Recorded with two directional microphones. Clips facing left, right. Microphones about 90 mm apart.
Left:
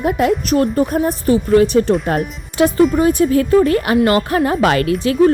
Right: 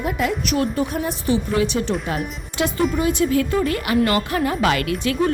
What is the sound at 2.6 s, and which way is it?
A woman's voice, 35° left (ahead or behind).